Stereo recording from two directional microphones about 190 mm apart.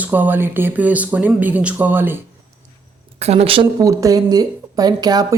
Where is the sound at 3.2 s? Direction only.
35° right (ahead or behind).